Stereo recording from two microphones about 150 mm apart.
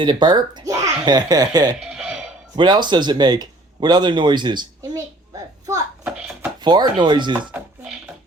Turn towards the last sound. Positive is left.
turn(degrees=-10)  # may be behind; listen again after turning